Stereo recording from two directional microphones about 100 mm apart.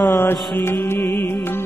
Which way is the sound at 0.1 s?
20° left (ahead or behind).